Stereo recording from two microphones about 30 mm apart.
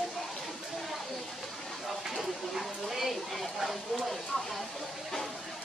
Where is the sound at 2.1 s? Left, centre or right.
Centre.